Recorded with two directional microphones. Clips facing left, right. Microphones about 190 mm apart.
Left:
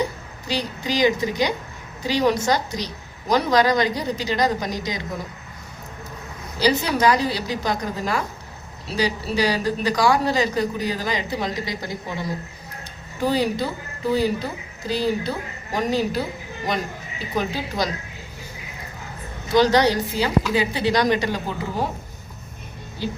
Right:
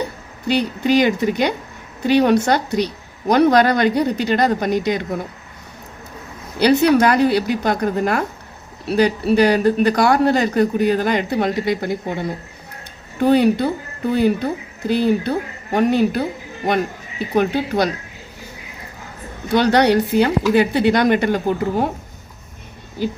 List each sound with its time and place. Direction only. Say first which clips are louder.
0.4 s speech: right 8 dB; 60° right (ahead or behind)
6.6 s speech: right 7 dB; 60° right (ahead or behind)
19.5 s speech: right 3 dB; 60° right (ahead or behind)